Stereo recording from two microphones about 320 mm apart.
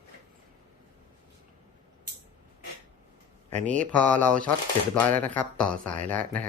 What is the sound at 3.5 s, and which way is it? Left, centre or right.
Speech, right.